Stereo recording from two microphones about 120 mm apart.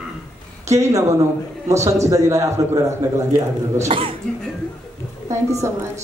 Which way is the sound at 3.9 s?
45° right (ahead or behind).